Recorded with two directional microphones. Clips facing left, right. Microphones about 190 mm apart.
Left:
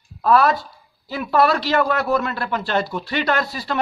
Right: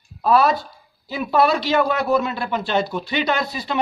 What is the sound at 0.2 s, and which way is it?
Speech, 25° right (ahead or behind).